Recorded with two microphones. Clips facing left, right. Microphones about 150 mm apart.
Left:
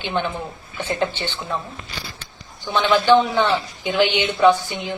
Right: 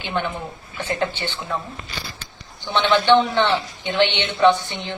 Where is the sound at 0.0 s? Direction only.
20° left (ahead or behind).